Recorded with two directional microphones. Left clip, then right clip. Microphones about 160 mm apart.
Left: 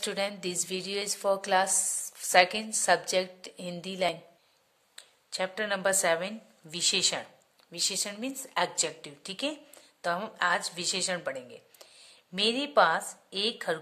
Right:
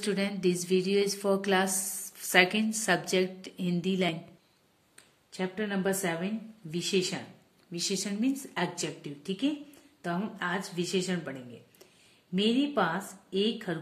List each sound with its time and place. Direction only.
0.0 s a woman's voice: 35° left (ahead or behind)
4.9 s speech: 45° left (ahead or behind)
7.7 s a woman's voice: 35° left (ahead or behind)
12.4 s a woman's voice: 40° left (ahead or behind)